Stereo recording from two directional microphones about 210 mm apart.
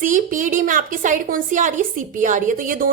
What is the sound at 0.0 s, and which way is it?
A woman's voice, 40° right (ahead or behind).